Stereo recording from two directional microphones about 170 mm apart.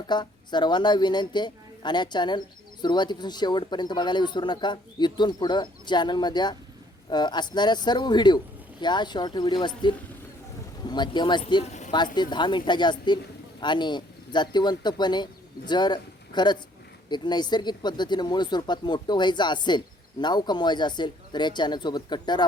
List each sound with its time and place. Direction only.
0.1 s speech: 25° left (ahead or behind)
11.6 s speech: 40° left (ahead or behind)
12.1 s speech: 25° left (ahead or behind)